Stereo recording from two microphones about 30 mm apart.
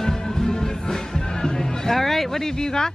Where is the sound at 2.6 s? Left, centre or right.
Left.